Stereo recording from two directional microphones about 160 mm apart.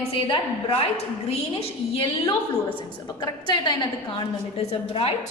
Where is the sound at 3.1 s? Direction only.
25° left (ahead or behind).